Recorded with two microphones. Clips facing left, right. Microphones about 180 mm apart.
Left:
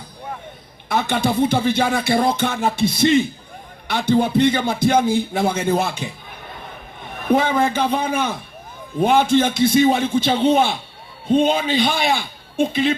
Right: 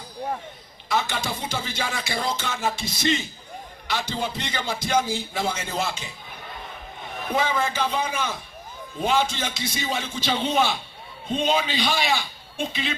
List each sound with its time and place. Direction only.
0.9 s music: 55° left (ahead or behind)
7.2 s music: 55° left (ahead or behind)
11.3 s a man's voice: 55° left (ahead or behind)